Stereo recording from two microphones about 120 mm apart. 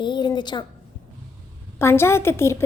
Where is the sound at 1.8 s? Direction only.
20° left (ahead or behind).